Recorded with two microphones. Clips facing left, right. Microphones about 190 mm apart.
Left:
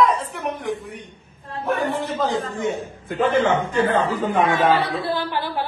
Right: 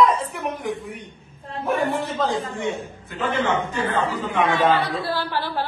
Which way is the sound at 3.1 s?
50° left (ahead or behind).